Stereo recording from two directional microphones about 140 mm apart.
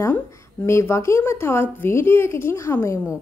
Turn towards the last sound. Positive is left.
turn(degrees=15)  # may be behind; listen again after turning